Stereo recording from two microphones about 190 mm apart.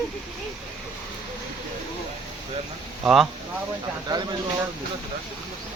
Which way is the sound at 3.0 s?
Centre (ahead or behind).